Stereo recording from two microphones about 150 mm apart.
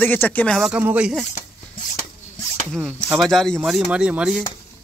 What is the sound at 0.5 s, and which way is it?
Speech, 5° right (ahead or behind).